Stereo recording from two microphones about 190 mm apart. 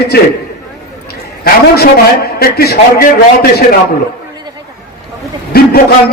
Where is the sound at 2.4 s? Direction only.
55° left (ahead or behind).